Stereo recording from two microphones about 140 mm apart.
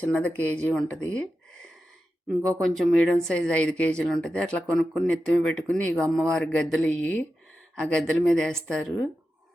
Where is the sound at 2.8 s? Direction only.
5° left (ahead or behind).